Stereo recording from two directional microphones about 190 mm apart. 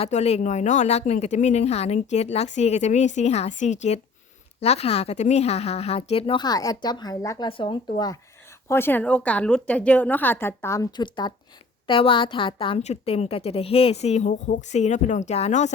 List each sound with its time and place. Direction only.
0.0 s a woman's voice: 35° left (ahead or behind)